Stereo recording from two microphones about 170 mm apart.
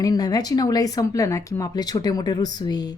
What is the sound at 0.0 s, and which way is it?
Speech, 20° left (ahead or behind).